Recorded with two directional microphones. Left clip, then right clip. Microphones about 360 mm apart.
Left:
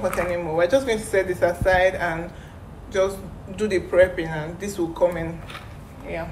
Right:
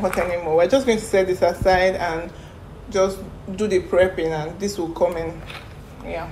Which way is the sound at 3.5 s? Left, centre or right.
Centre.